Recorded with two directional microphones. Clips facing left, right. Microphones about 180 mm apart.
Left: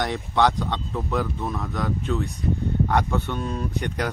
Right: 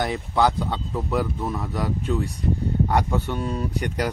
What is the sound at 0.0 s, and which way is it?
Speech, 5° right (ahead or behind).